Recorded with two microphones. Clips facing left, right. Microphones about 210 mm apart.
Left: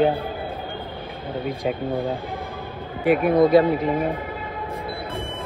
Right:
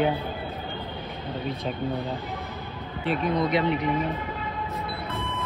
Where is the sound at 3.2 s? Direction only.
50° left (ahead or behind).